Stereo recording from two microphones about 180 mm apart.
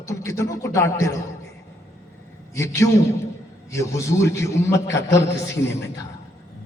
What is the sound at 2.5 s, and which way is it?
A man's voice, 15° left (ahead or behind).